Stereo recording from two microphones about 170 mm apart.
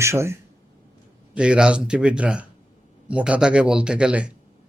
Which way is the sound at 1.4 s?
5° right (ahead or behind).